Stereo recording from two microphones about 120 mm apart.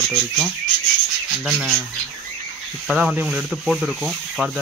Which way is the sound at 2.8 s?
5° right (ahead or behind).